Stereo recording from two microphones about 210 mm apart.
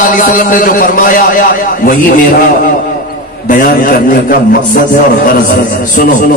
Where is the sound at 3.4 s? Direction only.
40° left (ahead or behind).